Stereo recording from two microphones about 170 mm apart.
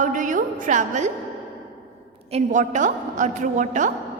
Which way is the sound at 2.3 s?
45° right (ahead or behind).